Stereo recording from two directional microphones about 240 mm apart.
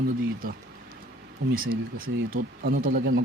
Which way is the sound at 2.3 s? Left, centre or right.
Right.